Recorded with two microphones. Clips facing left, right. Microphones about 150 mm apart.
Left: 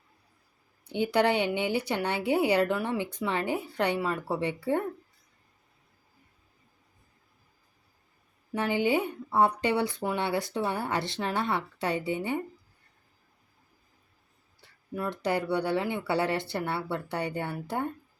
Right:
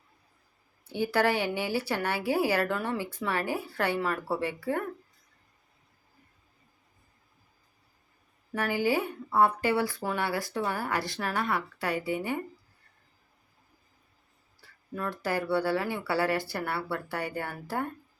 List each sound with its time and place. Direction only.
0.9 s a woman's voice: 20° left (ahead or behind)
8.5 s a woman's voice: 20° left (ahead or behind)
14.6 s a sound: 20° left (ahead or behind)
14.9 s a woman's voice: 20° left (ahead or behind)